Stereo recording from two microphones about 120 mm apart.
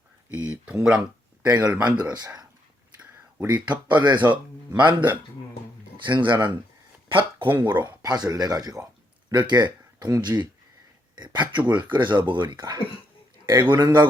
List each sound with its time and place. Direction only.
0.3 s speech: 10° right (ahead or behind)
2.1 s speech: 35° right (ahead or behind)
3.4 s speech: 35° right (ahead or behind)
7.5 s speech: 15° right (ahead or behind)
7.9 s a man's voice: 35° right (ahead or behind)